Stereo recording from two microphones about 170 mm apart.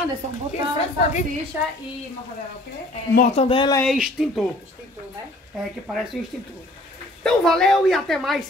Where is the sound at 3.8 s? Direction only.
5° right (ahead or behind).